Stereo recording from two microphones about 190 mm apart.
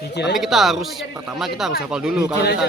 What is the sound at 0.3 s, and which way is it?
Speech, centre (ahead or behind).